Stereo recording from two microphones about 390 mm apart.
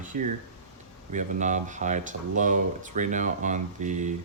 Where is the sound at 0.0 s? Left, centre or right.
Centre.